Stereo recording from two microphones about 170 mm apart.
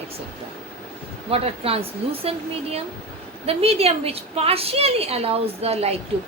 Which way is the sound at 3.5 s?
35° right (ahead or behind).